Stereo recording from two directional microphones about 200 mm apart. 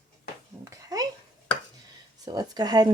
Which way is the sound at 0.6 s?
15° right (ahead or behind).